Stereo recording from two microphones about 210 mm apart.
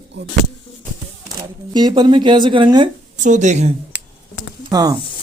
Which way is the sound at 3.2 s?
35° right (ahead or behind).